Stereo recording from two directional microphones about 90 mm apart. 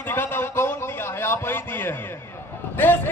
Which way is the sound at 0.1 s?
25° left (ahead or behind).